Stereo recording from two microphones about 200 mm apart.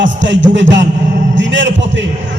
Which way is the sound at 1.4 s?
65° right (ahead or behind).